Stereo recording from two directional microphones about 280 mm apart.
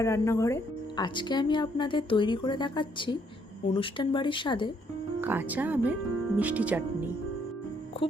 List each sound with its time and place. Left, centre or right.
0.0 s speech: centre
5.2 s speech: centre